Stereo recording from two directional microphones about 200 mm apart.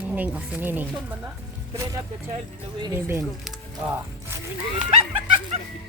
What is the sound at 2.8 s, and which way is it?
Speech, 15° right (ahead or behind).